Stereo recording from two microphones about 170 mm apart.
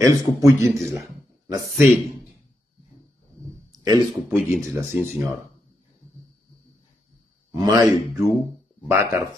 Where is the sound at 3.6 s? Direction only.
25° right (ahead or behind).